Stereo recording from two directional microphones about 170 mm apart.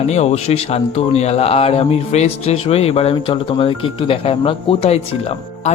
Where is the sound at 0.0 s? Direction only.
40° left (ahead or behind).